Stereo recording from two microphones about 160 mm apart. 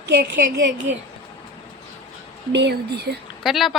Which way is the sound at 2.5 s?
90° right.